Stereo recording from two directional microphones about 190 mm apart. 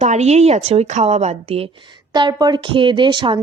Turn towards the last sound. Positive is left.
turn(degrees=-25)  # may be behind; listen again after turning